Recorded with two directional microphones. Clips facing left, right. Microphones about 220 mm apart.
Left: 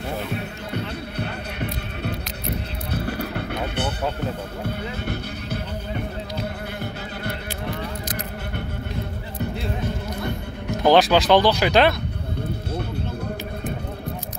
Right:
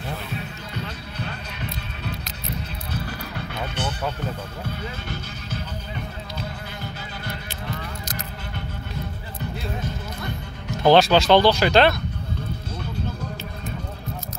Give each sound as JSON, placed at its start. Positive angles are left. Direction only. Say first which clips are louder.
{"t": 0.3, "sound": "music", "louder": "left 4 dB", "side_deg": 60}
{"t": 8.1, "sound": "keys jangling", "louder": "left 4 dB", "side_deg": 55}
{"t": 10.8, "sound": "speech", "louder": "right 1 dB", "side_deg": 15}